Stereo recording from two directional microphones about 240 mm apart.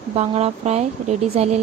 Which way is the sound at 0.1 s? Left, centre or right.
Right.